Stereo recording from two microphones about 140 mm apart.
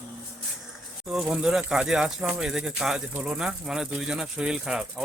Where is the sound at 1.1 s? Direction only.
5° right (ahead or behind).